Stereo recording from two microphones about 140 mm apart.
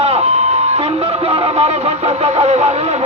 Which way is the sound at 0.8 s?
45° right (ahead or behind).